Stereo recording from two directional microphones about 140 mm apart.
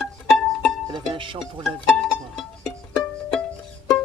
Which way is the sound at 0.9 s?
35° right (ahead or behind).